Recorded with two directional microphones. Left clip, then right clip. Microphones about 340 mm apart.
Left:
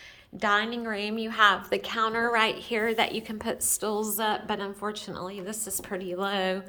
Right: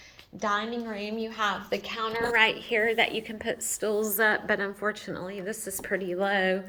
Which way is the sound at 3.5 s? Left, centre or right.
Left.